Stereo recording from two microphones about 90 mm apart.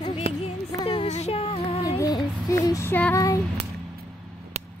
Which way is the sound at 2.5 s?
35° left (ahead or behind).